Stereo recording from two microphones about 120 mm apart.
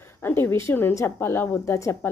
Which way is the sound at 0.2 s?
20° left (ahead or behind).